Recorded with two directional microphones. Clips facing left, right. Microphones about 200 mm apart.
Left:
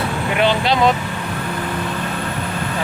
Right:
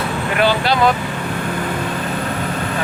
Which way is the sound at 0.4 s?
25° left (ahead or behind).